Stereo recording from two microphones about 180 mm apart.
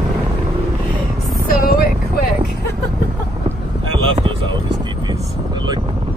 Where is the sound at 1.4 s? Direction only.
55° left (ahead or behind).